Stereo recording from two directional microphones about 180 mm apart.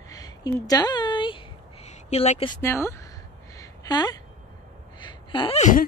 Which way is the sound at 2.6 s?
15° left (ahead or behind).